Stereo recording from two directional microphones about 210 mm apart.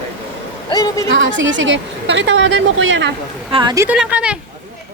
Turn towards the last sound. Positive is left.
turn(degrees=-5)  # may be behind; listen again after turning